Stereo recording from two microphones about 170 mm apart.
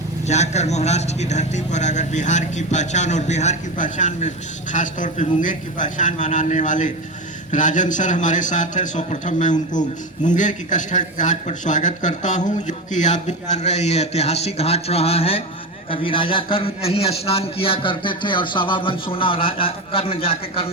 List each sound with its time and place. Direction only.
0.3 s a man's voice: 40° left (ahead or behind)